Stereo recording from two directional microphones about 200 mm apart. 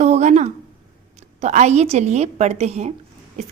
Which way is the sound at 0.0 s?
35° right (ahead or behind).